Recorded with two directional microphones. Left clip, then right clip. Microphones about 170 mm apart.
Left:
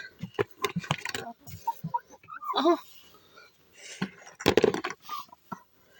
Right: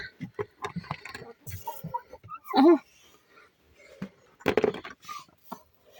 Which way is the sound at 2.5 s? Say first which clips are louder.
Right 5 dB; 25° right (ahead or behind).